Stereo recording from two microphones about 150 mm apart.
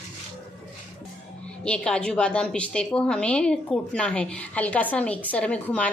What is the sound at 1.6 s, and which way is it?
A woman's voice, 5° left (ahead or behind).